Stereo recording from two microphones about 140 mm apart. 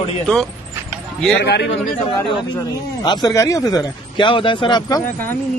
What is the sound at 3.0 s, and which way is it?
Speech, 30° left (ahead or behind).